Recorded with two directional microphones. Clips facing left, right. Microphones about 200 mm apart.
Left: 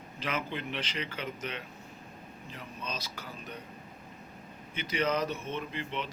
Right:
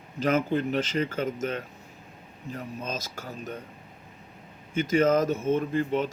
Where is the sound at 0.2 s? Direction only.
45° right (ahead or behind).